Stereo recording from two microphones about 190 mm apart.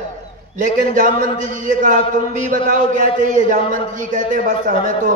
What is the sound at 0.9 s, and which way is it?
A man's voice, 45° right (ahead or behind).